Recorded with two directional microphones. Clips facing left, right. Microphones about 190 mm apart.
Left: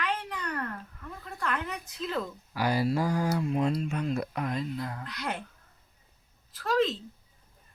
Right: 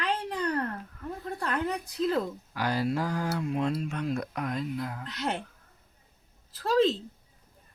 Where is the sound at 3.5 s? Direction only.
Centre (ahead or behind).